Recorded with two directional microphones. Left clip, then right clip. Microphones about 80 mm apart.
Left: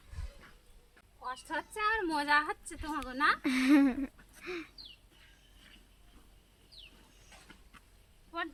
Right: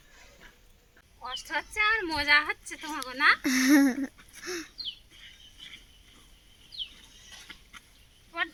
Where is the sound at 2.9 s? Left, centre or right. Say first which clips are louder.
Right 6 dB; centre.